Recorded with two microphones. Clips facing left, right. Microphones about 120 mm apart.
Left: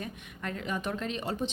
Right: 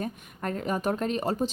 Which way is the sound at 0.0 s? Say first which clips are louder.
Right 6 dB; 40° right (ahead or behind).